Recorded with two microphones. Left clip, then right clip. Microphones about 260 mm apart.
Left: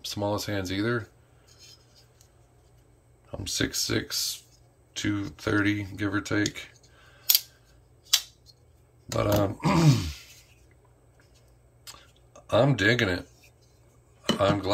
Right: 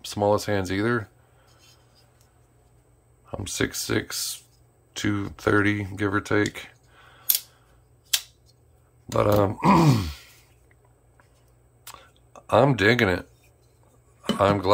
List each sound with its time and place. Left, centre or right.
0.0 s speech: centre
3.3 s speech: centre
9.1 s speech: centre
11.8 s a sound: centre
14.4 s speech: centre